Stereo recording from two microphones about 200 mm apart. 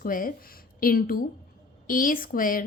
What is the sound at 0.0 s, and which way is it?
A woman's voice, 45° left (ahead or behind).